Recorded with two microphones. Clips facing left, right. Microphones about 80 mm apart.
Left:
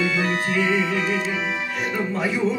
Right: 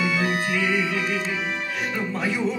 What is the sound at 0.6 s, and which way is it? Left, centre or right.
Music, left.